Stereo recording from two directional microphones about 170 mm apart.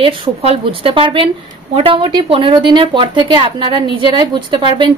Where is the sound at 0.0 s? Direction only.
35° right (ahead or behind).